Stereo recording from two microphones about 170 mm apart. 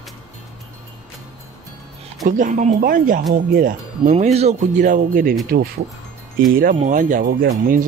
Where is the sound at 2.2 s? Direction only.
50° right (ahead or behind).